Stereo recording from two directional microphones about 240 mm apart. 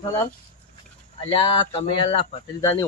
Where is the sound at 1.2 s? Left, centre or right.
Left.